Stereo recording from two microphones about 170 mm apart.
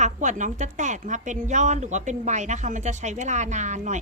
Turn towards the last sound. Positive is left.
turn(degrees=-45)  # may be behind; listen again after turning